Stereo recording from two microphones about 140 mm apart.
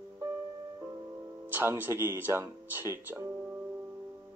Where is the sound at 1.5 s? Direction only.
15° right (ahead or behind).